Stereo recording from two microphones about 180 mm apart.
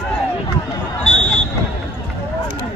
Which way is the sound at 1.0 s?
5° left (ahead or behind).